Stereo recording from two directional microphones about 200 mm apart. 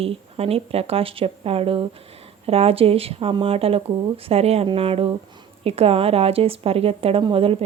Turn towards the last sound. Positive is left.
turn(degrees=-30)  # may be behind; listen again after turning